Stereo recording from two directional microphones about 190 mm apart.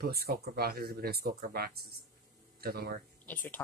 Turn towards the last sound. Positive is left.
turn(degrees=10)  # may be behind; listen again after turning